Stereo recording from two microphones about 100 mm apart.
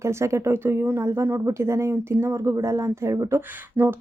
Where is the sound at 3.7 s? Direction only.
20° right (ahead or behind).